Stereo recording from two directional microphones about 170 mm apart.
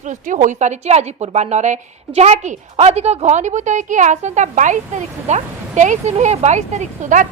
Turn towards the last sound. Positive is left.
turn(degrees=-45)  # may be behind; listen again after turning